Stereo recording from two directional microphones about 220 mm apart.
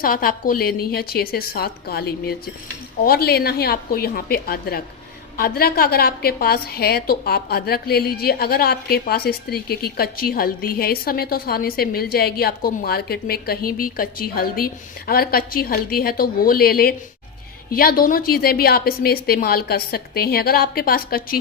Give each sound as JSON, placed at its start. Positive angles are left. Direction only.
{"t": 0.0, "sound": "a woman's voice", "side_deg": 40}